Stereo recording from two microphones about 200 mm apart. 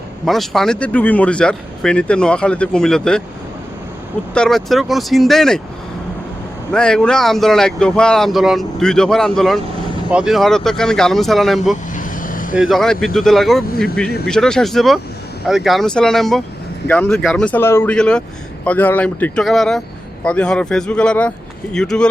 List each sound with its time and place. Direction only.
0.3 s speech: centre (ahead or behind)
4.4 s speech: centre (ahead or behind)
6.7 s speech: 5° left (ahead or behind)
11.9 s vehicle: 40° left (ahead or behind)
12.5 s speech: centre (ahead or behind)